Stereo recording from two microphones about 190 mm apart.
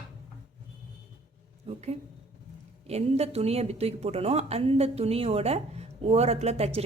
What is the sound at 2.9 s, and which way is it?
A woman's voice, 35° right (ahead or behind).